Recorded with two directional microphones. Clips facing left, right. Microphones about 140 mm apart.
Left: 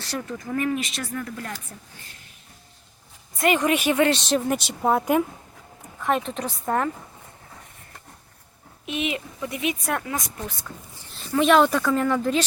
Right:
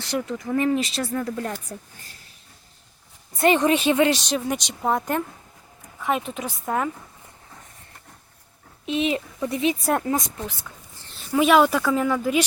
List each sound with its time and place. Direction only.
0.0 s speech: 15° right (ahead or behind)
3.3 s speech: 30° right (ahead or behind)
4.2 s speech: centre (ahead or behind)
6.0 s speech: 5° right (ahead or behind)
8.9 s a woman's voice: 30° right (ahead or behind)
11.1 s speech: 5° right (ahead or behind)